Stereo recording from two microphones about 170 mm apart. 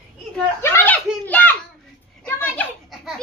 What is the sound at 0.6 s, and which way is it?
A child's voice, 10° left (ahead or behind).